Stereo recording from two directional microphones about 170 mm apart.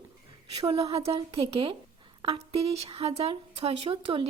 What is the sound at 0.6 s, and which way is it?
A woman's voice, 35° right (ahead or behind).